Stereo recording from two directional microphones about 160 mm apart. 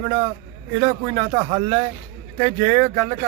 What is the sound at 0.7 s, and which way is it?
Speech, 25° right (ahead or behind).